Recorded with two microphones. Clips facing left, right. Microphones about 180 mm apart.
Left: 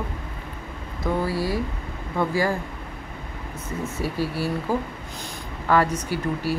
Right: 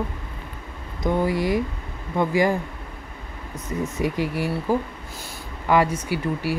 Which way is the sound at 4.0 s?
15° right (ahead or behind).